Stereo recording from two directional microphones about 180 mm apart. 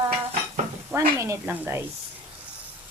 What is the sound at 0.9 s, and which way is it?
Speech, 15° right (ahead or behind).